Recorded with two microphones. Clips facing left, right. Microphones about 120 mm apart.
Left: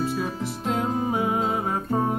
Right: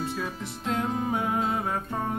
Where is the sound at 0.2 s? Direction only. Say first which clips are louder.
Left 5 dB; 35° left (ahead or behind).